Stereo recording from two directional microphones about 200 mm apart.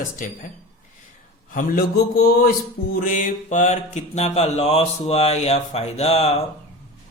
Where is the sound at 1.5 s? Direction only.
50° left (ahead or behind).